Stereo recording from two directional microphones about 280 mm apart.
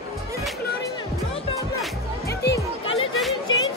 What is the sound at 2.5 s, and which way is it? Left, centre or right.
Music, centre.